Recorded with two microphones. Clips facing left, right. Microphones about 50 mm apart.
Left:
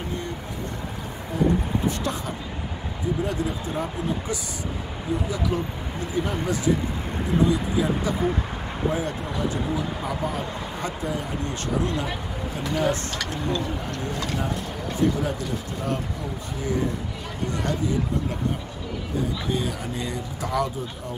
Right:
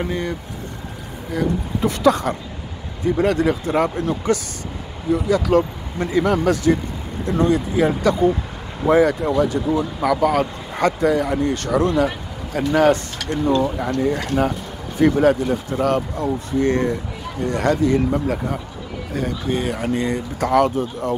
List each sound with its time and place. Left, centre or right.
0.0 s speech: right
7.3 s speech: right
8.0 s speech: right
8.8 s speech: right
13.6 s speech: right
17.4 s speech: right
19.5 s speech: right